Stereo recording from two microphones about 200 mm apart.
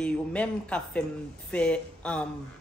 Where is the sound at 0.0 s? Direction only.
5° left (ahead or behind).